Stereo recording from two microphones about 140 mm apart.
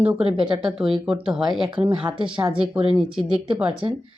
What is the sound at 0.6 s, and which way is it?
Speech, 5° right (ahead or behind).